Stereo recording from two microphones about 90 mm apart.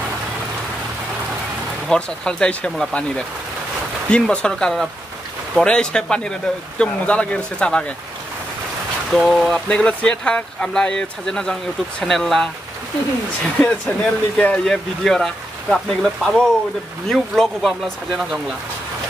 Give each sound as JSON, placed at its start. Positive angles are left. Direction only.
{"t": 1.9, "sound": "speech", "side_deg": 10}
{"t": 9.1, "sound": "speech", "side_deg": 0}
{"t": 9.7, "sound": "speech", "side_deg": 10}
{"t": 13.6, "sound": "speech", "side_deg": 15}